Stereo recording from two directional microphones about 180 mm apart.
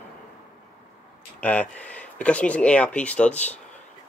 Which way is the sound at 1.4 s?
10° left (ahead or behind).